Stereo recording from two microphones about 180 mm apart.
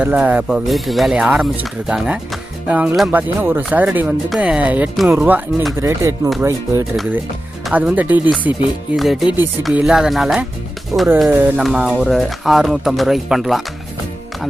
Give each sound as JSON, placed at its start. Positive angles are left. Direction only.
{"t": 0.0, "sound": "speech", "side_deg": -10}
{"t": 6.9, "sound": "speech", "side_deg": 0}
{"t": 10.9, "sound": "speech", "side_deg": -15}